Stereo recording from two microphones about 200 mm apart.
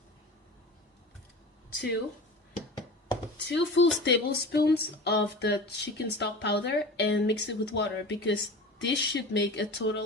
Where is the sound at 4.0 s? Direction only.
55° left (ahead or behind).